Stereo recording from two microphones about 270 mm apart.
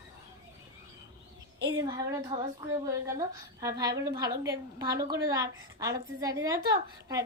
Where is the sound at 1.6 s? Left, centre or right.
Centre.